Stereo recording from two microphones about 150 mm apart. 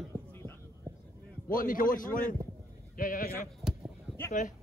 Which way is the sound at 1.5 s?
65° left (ahead or behind).